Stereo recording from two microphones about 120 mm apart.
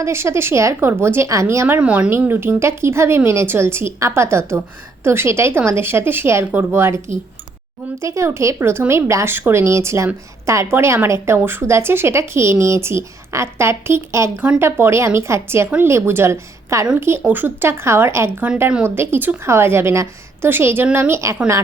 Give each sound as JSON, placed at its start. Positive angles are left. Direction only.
{"t": 0.0, "sound": "speech", "side_deg": -20}
{"t": 8.0, "sound": "speech", "side_deg": -25}